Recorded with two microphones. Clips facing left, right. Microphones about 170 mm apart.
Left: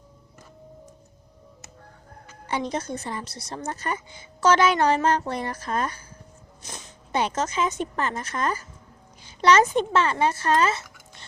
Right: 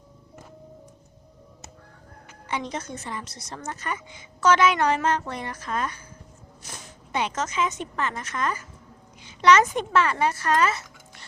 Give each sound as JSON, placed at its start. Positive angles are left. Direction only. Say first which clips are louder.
{"t": 2.5, "sound": "a woman's voice", "louder": "left 3 dB", "side_deg": 35}
{"t": 6.6, "sound": "a sound", "louder": "left 1 dB", "side_deg": 20}
{"t": 7.1, "sound": "a woman's voice", "louder": "left 3 dB", "side_deg": 35}